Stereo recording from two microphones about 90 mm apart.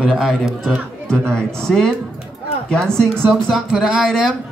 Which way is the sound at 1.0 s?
5° left (ahead or behind).